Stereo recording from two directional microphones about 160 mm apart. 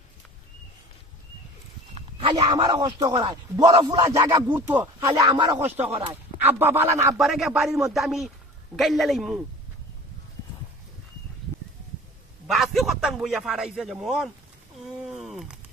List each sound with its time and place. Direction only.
2.0 s a sound: 40° right (ahead or behind)
2.5 s speech: 25° right (ahead or behind)
6.4 s speech: 15° right (ahead or behind)
7.2 s speech: centre (ahead or behind)
12.5 s speech: centre (ahead or behind)
14.8 s a sound: centre (ahead or behind)